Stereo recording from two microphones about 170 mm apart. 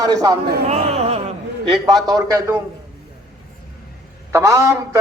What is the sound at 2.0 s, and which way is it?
Speech, 20° right (ahead or behind).